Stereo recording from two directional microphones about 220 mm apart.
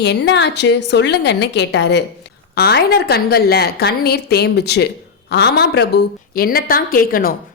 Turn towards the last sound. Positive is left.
turn(degrees=40)  # may be behind; listen again after turning